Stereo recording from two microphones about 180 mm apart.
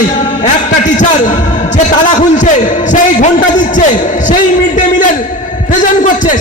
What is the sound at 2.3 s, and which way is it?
A man's voice, 45° left (ahead or behind).